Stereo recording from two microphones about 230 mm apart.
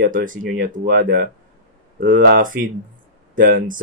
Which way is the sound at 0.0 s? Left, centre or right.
Right.